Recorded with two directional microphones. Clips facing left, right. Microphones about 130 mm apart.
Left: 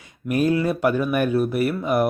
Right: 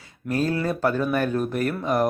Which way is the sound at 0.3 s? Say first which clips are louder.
Left 4 dB; 15° left (ahead or behind).